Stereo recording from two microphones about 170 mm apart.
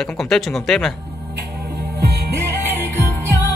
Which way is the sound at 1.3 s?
65° right (ahead or behind).